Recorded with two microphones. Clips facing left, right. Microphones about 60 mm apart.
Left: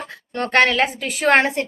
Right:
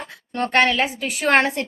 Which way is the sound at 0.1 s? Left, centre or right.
Left.